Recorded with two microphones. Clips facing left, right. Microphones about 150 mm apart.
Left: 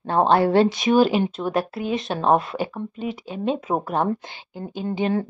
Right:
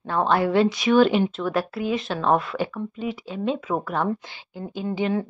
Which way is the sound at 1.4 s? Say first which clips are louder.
Left 1 dB; 20° left (ahead or behind).